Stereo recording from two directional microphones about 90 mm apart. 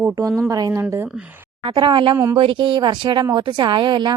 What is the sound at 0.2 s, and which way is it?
Speech, 35° right (ahead or behind).